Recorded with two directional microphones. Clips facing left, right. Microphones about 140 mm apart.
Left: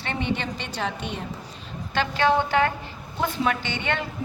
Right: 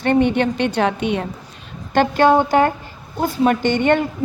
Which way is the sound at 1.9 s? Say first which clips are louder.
Right 8 dB; 45° right (ahead or behind).